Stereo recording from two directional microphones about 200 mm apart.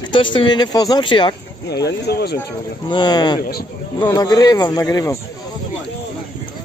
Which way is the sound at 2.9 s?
20° left (ahead or behind).